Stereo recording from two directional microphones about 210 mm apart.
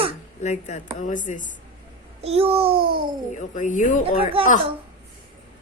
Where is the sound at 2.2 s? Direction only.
30° right (ahead or behind).